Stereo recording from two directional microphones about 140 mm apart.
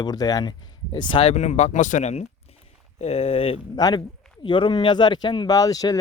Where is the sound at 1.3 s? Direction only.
55° left (ahead or behind).